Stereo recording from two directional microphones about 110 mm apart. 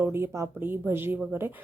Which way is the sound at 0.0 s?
20° right (ahead or behind).